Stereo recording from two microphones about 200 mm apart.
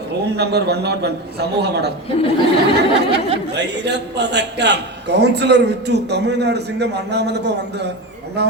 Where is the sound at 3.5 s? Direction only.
55° right (ahead or behind).